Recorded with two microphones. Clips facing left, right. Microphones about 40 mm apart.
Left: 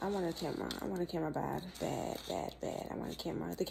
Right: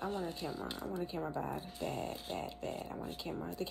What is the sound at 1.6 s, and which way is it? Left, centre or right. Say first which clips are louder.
Speech: left 1 dB; left.